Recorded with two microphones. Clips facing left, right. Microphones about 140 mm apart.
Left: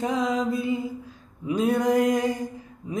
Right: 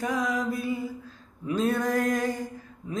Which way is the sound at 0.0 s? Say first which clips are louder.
Left 3 dB; 25° left (ahead or behind).